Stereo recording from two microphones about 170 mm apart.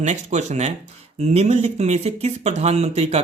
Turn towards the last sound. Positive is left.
turn(degrees=-40)  # may be behind; listen again after turning